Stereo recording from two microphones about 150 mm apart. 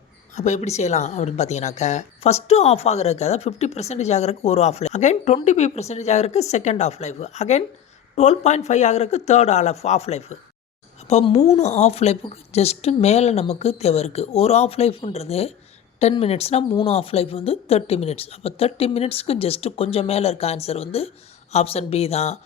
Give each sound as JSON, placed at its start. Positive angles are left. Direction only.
{"t": 0.3, "sound": "a woman's voice", "side_deg": 50}